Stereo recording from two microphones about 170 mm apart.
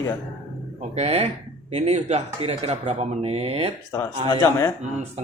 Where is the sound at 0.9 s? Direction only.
35° right (ahead or behind).